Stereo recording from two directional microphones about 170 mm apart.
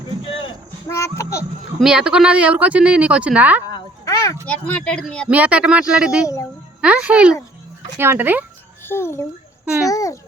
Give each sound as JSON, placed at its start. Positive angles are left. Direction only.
{"t": 0.3, "sound": "a sound", "side_deg": 30}
{"t": 0.9, "sound": "a sound", "side_deg": 15}
{"t": 1.8, "sound": "speech", "side_deg": -5}
{"t": 3.7, "sound": "a sound", "side_deg": 25}
{"t": 4.4, "sound": "speech", "side_deg": 5}
{"t": 5.3, "sound": "speech", "side_deg": -5}
{"t": 6.2, "sound": "a woman's voice", "side_deg": 20}
{"t": 6.8, "sound": "speech", "side_deg": -5}
{"t": 8.8, "sound": "a child's voice", "side_deg": 15}